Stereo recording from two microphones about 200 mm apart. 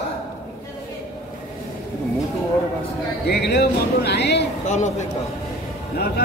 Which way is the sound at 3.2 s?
55° left (ahead or behind).